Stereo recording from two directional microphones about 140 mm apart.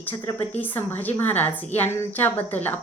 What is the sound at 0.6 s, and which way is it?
A woman's voice, 15° left (ahead or behind).